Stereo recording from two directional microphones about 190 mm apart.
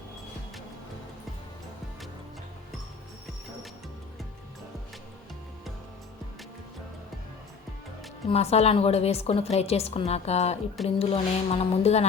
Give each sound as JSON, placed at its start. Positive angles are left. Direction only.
{"t": 8.3, "sound": "a woman's voice", "side_deg": 35}